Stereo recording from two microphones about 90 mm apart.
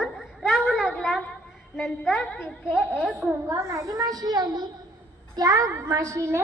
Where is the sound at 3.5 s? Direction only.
40° right (ahead or behind).